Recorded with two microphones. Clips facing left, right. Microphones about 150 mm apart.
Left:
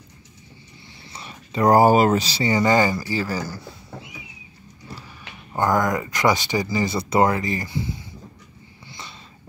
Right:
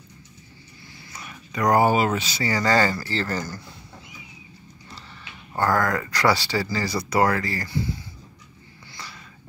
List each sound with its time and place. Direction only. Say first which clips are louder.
1.1 s speech: left 4 dB; 30° left (ahead or behind)
2.4 s speech: left 2 dB; 20° left (ahead or behind)
5.5 s speech: left 2 dB; 20° left (ahead or behind)
8.9 s a sound: left 1 dB; 20° left (ahead or behind)